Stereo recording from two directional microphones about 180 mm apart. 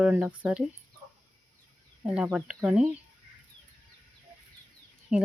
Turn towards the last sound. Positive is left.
turn(degrees=-5)  # may be behind; listen again after turning